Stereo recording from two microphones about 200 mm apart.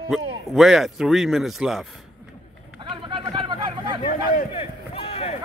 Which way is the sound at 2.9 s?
25° right (ahead or behind).